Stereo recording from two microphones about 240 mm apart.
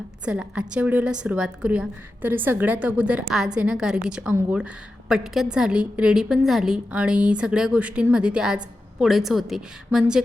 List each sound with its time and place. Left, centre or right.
0.3 s a woman's voice: centre